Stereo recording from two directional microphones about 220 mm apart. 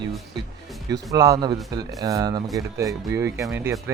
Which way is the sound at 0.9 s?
15° right (ahead or behind).